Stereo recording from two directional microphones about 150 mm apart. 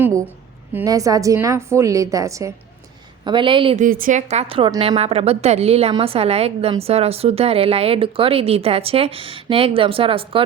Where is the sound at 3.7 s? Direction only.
65° right (ahead or behind).